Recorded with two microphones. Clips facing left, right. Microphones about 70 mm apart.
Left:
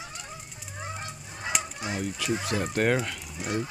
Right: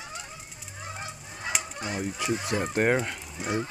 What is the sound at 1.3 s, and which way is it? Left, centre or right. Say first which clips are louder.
Goose: left 1 dB; centre.